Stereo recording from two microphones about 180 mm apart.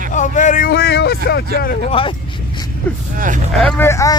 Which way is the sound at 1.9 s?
30° left (ahead or behind).